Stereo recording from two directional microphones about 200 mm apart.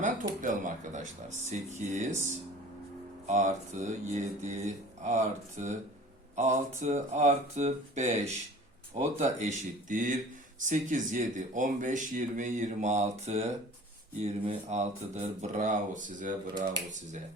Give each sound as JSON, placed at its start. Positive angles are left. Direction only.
{"t": 0.0, "sound": "speech", "side_deg": -40}
{"t": 3.2, "sound": "speech", "side_deg": -35}